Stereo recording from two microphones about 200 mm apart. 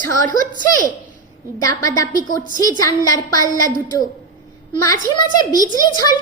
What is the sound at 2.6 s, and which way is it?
A child's voice, 20° left (ahead or behind).